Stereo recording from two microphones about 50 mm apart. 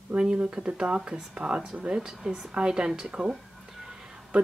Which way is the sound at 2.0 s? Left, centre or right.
Centre.